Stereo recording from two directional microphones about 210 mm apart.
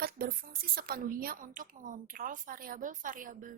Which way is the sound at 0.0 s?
45° right (ahead or behind).